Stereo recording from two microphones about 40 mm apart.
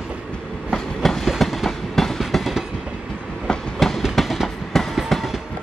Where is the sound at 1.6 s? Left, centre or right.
Centre.